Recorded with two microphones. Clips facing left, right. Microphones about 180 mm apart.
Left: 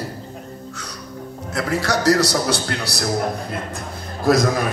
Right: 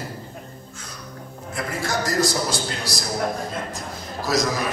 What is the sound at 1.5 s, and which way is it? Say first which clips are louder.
A man's voice: left 5 dB; 75° left (ahead or behind).